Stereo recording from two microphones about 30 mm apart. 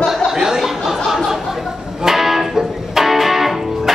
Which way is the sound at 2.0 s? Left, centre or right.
Centre.